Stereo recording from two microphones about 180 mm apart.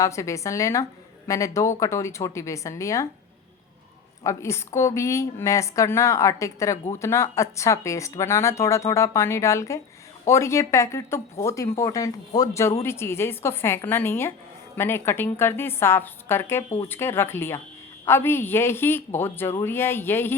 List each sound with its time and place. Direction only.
0.0 s speech: 15° left (ahead or behind)
4.2 s speech: 15° left (ahead or behind)